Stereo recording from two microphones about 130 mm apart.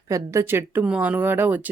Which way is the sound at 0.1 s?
20° right (ahead or behind).